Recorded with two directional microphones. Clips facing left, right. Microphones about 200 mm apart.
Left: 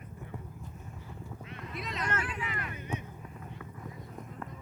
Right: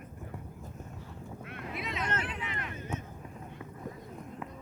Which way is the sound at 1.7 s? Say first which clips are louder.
Right 1 dB; centre (ahead or behind).